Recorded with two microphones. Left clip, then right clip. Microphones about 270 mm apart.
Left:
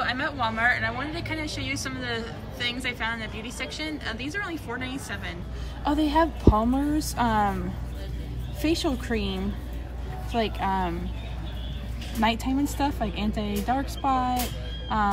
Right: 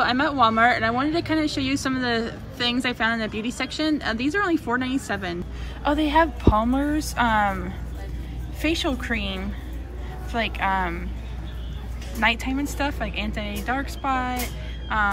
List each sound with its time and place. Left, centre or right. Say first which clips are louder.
0.0 s a woman's voice: right 7 dB; centre
5.9 s speech: right 3 dB; centre
12.2 s speech: right 2 dB; centre